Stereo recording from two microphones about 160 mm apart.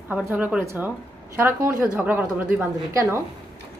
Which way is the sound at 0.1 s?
10° right (ahead or behind).